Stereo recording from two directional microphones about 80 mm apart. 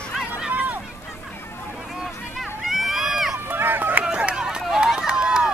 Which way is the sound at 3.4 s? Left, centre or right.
Right.